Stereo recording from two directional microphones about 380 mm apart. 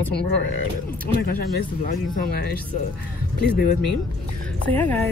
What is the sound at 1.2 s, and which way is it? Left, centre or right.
Speech, left.